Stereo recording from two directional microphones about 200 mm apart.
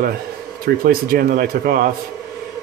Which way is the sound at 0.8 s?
45° right (ahead or behind).